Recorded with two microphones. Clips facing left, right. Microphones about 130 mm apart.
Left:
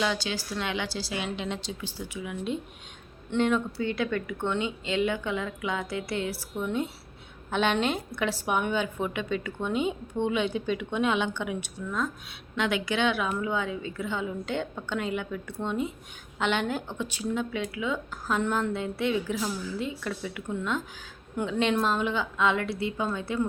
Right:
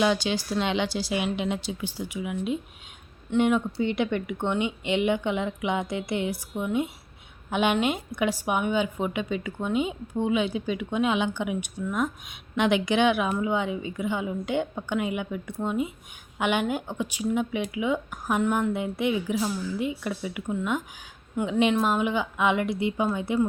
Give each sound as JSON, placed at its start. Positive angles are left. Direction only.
{"t": 0.0, "sound": "a woman's voice", "side_deg": -15}